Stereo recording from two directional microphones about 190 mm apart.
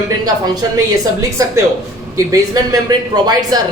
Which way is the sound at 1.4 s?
15° right (ahead or behind).